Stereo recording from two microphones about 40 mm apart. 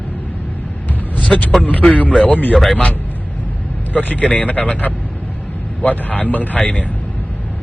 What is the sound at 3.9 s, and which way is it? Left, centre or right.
Speech, left.